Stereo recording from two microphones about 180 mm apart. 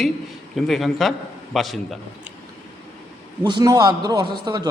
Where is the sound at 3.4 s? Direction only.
25° right (ahead or behind).